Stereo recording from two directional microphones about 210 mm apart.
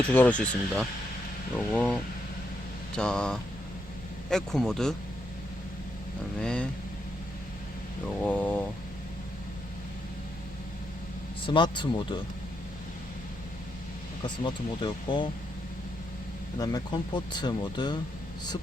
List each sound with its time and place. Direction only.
0.1 s a man's voice: 10° left (ahead or behind)
6.4 s a man's voice: 5° left (ahead or behind)
8.2 s speech: 5° left (ahead or behind)
11.4 s speech: 20° left (ahead or behind)
14.3 s speech: 20° left (ahead or behind)
16.6 s speech: 20° left (ahead or behind)